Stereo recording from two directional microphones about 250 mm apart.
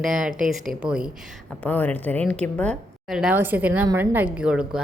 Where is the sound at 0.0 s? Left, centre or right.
Centre.